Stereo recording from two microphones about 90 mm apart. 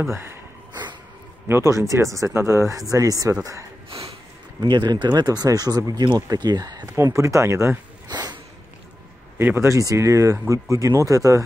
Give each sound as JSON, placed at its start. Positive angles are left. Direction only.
{"t": 0.0, "sound": "speech", "side_deg": -30}
{"t": 1.5, "sound": "speech", "side_deg": -30}
{"t": 3.9, "sound": "snort", "side_deg": -90}
{"t": 4.6, "sound": "speech", "side_deg": -55}
{"t": 7.0, "sound": "speech", "side_deg": -35}
{"t": 8.1, "sound": "a sound", "side_deg": -50}
{"t": 9.4, "sound": "speech", "side_deg": -25}